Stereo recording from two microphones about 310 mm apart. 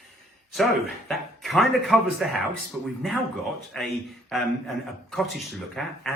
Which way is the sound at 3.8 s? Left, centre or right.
Centre.